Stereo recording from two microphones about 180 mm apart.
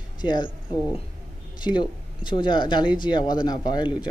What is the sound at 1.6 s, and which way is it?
Speech, 25° left (ahead or behind).